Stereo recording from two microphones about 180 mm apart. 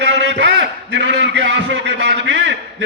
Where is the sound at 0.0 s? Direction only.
85° right.